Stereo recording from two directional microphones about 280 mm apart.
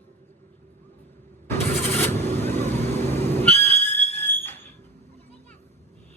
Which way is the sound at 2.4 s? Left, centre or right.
Right.